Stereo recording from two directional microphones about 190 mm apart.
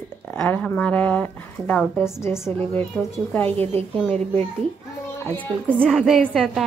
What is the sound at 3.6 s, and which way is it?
Speech, 30° right (ahead or behind).